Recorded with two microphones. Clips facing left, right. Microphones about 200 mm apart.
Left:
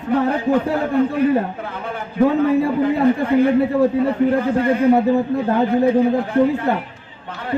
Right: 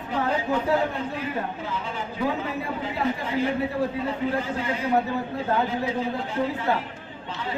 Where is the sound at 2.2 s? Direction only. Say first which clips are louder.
Left 13 dB; 50° left (ahead or behind).